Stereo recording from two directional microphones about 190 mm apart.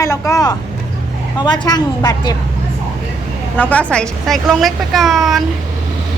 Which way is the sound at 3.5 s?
10° left (ahead or behind).